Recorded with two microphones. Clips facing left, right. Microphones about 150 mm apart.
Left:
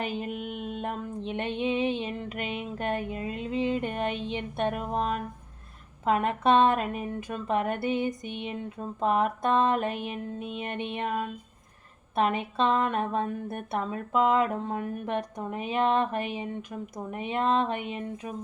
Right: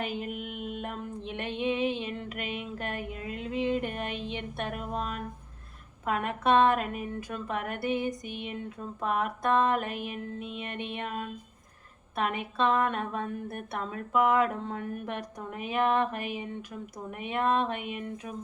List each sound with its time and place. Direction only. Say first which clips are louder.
0.0 s a sound: left 2 dB; 25° left (ahead or behind)
6.1 s speech: left 3 dB; 25° left (ahead or behind)
12.1 s speech: left 4 dB; 25° left (ahead or behind)